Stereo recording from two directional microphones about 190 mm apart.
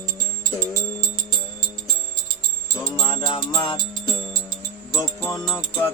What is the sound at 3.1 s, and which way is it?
Music, 25° left (ahead or behind).